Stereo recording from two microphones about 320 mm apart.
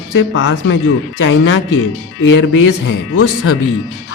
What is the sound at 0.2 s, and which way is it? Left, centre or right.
Speech, left.